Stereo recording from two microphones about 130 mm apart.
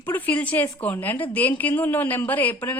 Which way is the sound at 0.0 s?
15° left (ahead or behind).